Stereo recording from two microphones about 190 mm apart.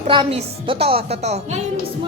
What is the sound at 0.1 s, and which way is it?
A woman's voice, 25° right (ahead or behind).